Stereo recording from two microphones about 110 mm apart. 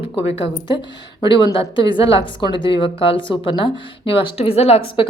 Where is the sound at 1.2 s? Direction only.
50° left (ahead or behind).